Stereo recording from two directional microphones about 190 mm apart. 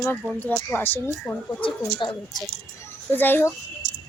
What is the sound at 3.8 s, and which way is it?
Cricket, 65° right (ahead or behind).